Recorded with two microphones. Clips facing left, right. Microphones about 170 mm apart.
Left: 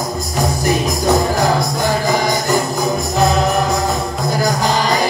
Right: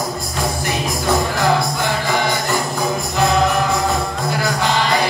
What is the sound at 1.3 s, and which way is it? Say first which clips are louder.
Music: left 1 dB; 40° left (ahead or behind).